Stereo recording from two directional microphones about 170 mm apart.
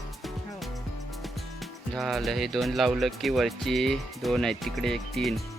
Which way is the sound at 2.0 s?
Centre (ahead or behind).